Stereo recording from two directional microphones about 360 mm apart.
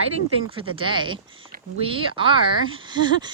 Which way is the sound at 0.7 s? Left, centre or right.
Centre.